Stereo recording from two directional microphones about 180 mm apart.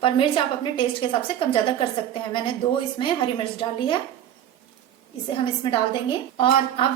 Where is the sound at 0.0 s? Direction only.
30° left (ahead or behind).